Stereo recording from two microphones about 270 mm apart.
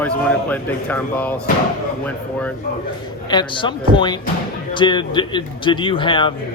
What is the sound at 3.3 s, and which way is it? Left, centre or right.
A man's voice, centre.